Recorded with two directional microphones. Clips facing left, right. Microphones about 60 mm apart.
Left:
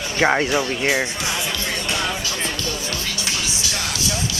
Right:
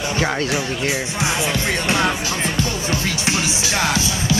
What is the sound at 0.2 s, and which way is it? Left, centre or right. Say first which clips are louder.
Speech: left 5 dB; left.